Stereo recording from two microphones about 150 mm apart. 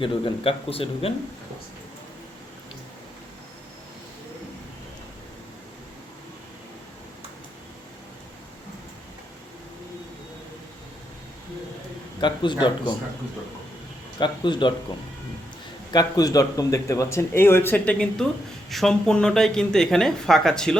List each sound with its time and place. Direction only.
0.0 s speech: 35° left (ahead or behind)
12.2 s speech: 30° left (ahead or behind)
14.2 s speech: 30° left (ahead or behind)
15.9 s a man's voice: 25° left (ahead or behind); by 20.7 s 5° left (ahead or behind)